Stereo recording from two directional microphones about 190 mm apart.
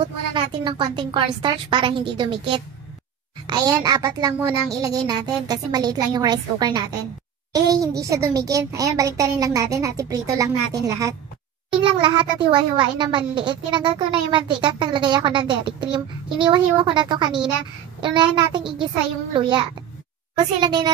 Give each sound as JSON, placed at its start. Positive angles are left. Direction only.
{"t": 0.0, "sound": "a child's voice", "side_deg": -25}
{"t": 20.3, "sound": "a child's voice", "side_deg": -20}